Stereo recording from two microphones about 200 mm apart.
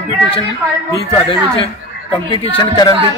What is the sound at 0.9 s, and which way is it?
A man's voice, 25° left (ahead or behind).